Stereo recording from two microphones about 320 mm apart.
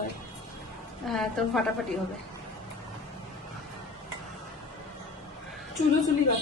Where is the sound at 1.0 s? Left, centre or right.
Centre.